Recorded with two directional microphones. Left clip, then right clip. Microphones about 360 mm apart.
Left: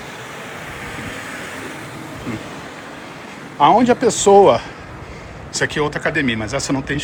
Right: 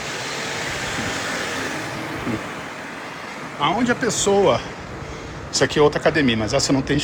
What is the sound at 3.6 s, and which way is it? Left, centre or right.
Speech, centre.